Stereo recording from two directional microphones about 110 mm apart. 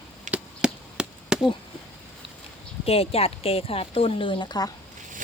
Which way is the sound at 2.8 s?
65° left (ahead or behind).